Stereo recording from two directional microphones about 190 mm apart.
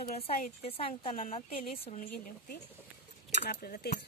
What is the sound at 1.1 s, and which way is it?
Speech, 45° left (ahead or behind).